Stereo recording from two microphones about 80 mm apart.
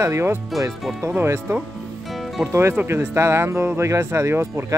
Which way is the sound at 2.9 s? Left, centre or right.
Right.